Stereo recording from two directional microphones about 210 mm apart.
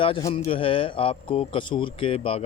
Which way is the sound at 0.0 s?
20° left (ahead or behind).